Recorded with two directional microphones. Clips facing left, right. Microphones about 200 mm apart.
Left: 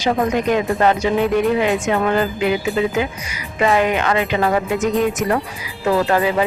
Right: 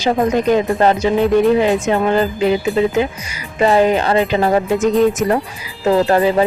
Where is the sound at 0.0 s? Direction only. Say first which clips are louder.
Right 3 dB; 30° right (ahead or behind).